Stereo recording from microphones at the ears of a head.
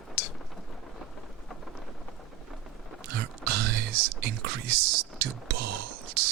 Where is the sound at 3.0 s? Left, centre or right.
Right.